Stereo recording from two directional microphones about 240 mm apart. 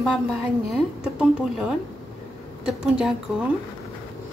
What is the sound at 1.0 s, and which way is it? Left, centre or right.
A woman's voice, centre.